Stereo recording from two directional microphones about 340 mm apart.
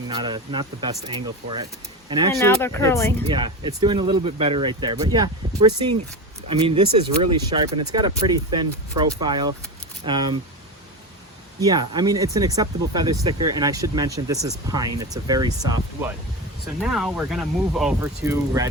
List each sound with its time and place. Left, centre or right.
0.1 s speech: centre
2.3 s speech: centre
3.2 s speech: centre
11.6 s speech: centre